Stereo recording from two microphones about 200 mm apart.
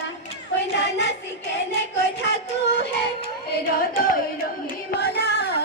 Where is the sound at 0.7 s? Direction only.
60° left (ahead or behind).